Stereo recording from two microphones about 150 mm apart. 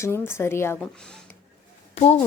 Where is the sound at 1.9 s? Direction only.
45° left (ahead or behind).